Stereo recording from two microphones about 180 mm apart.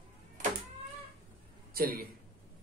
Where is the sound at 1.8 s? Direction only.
55° right (ahead or behind).